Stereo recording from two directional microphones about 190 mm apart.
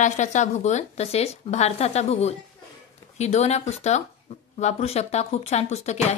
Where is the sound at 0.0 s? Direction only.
40° left (ahead or behind).